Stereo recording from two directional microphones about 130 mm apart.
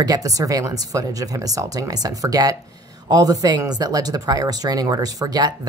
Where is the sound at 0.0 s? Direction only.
30° right (ahead or behind).